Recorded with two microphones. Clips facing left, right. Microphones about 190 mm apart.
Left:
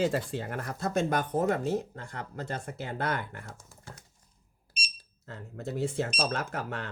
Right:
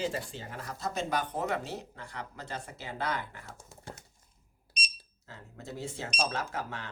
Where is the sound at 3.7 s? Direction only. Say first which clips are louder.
Right 3 dB; 25° right (ahead or behind).